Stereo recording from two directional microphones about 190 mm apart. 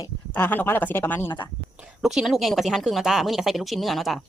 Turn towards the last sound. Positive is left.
turn(degrees=0)  # may be behind; listen again after turning